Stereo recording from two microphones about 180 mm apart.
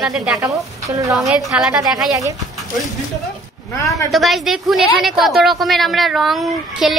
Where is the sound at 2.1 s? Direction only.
20° right (ahead or behind).